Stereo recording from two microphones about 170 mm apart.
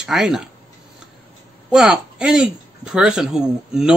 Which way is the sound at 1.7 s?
5° right (ahead or behind).